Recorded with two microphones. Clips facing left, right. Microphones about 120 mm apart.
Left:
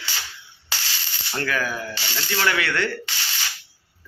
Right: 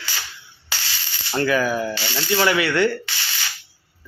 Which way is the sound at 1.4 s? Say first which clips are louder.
Right 6 dB; 10° right (ahead or behind).